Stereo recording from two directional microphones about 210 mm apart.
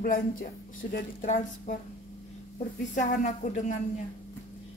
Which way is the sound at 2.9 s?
35° left (ahead or behind).